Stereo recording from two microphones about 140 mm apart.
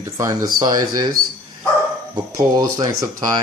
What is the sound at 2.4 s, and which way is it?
Speech, 25° right (ahead or behind).